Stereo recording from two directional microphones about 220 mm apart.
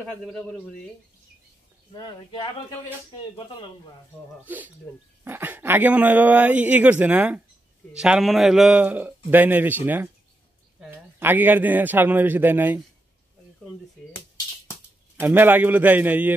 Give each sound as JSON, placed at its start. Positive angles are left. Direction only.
{"t": 0.0, "sound": "a man's voice", "side_deg": 5}
{"t": 2.0, "sound": "speech", "side_deg": 20}
{"t": 4.5, "sound": "speech", "side_deg": -10}
{"t": 15.1, "sound": "speech", "side_deg": -10}